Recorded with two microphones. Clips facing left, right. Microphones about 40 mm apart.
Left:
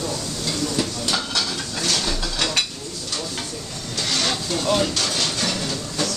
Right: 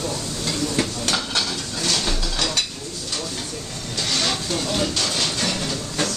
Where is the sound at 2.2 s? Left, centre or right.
Centre.